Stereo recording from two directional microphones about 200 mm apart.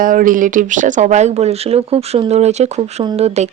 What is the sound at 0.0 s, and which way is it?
Speech, 45° right (ahead or behind).